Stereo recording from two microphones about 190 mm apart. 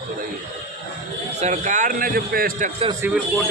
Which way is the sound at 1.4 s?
40° right (ahead or behind).